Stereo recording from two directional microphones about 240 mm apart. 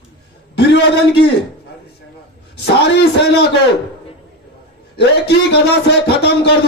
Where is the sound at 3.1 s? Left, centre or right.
Left.